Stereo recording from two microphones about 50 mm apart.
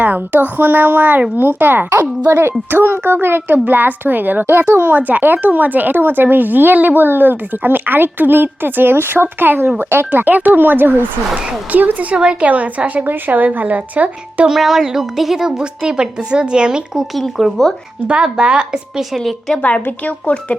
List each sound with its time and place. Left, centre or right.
0.0 s speech: right
2.3 s speech: right
4.9 s speech: right
12.1 s a woman's voice: centre
14.5 s a woman's voice: centre
17.2 s a woman's voice: centre
18.1 s a woman's voice: centre
19.1 s a woman's voice: centre
20.1 s speech: left